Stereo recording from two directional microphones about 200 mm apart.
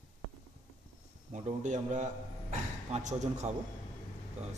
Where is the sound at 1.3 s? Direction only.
35° right (ahead or behind).